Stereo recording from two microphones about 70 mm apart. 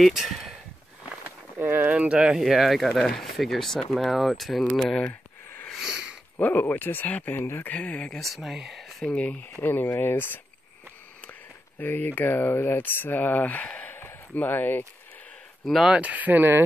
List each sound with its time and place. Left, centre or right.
0.0 s speech: centre
1.6 s a sound: right
1.9 s speech: centre
2.1 s speech: centre
5.8 s a sound: centre
6.4 s speech: left
7.7 s speech: centre
8.2 s speech: centre
9.0 s speech: centre
9.7 s speech: left
11.8 s speech: left
15.6 s speech: centre
15.9 s speech: right